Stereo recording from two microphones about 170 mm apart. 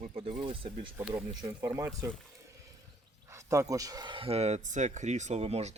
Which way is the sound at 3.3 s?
15° right (ahead or behind).